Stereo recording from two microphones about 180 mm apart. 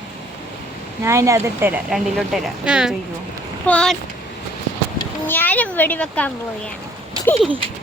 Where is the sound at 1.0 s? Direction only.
15° right (ahead or behind); by 4.0 s 5° left (ahead or behind).